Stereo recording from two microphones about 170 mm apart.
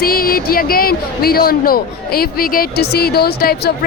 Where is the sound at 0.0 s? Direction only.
60° left (ahead or behind).